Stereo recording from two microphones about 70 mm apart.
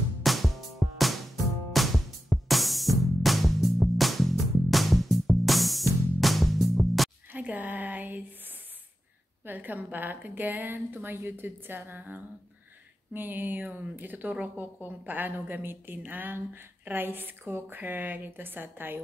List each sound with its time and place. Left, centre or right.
0.2 s music: centre
7.3 s a sound: right
9.5 s a woman's voice: right